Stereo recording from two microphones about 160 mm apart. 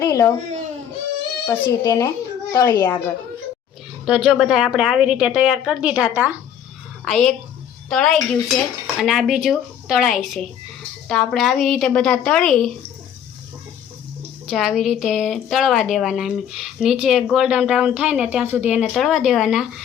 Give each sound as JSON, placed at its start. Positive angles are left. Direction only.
{"t": 0.0, "sound": "a child's voice", "side_deg": 20}
{"t": 1.5, "sound": "a child's voice", "side_deg": 20}
{"t": 4.0, "sound": "speech", "side_deg": -5}
{"t": 7.0, "sound": "a woman's voice", "side_deg": 5}
{"t": 14.4, "sound": "speech", "side_deg": 0}